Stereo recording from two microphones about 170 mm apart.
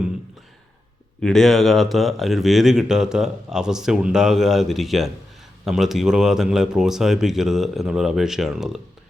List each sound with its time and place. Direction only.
1.2 s speech: centre (ahead or behind)